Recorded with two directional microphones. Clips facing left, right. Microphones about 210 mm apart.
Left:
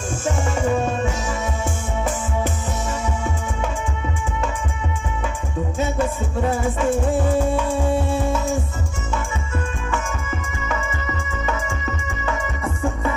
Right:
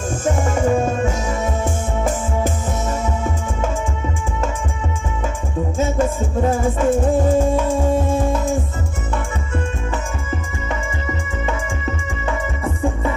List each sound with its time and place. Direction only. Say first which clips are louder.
0.2 s music: right 4 dB; 50° right (ahead or behind)
5.8 s music: right 3 dB; 40° right (ahead or behind)